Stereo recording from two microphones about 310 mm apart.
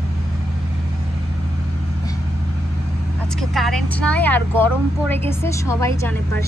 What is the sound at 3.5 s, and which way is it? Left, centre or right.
A woman's voice, centre.